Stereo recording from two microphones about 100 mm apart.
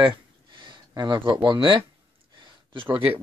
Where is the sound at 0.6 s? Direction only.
50° right (ahead or behind).